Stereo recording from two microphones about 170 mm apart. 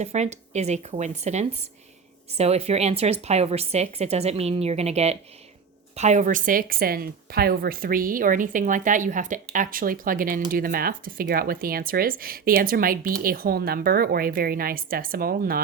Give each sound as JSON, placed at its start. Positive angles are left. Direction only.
{"t": 0.0, "sound": "speech", "side_deg": -40}